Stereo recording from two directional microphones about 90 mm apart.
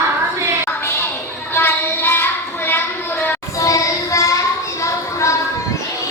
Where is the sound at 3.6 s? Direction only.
35° left (ahead or behind).